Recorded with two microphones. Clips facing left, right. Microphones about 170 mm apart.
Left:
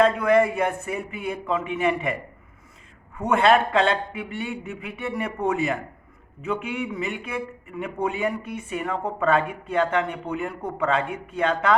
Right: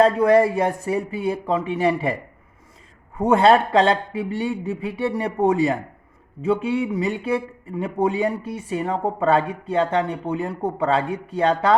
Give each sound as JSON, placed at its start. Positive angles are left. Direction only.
{"t": 0.0, "sound": "a man's voice", "side_deg": -35}
{"t": 3.2, "sound": "a man's voice", "side_deg": -30}